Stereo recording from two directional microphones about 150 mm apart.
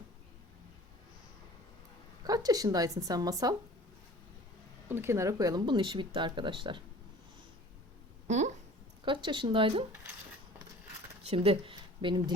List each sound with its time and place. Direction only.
2.2 s speech: 25° right (ahead or behind)
4.9 s speech: 15° right (ahead or behind); by 6.8 s 30° right (ahead or behind)
8.3 s speech: 50° right (ahead or behind)
9.0 s speech: 30° right (ahead or behind)
11.2 s speech: 40° right (ahead or behind)